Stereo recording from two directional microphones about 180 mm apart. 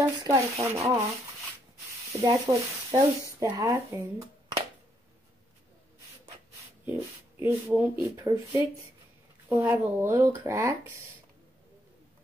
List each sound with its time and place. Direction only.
0.0 s speech: 15° right (ahead or behind)
2.1 s speech: 20° right (ahead or behind)
7.0 s speech: 15° right (ahead or behind)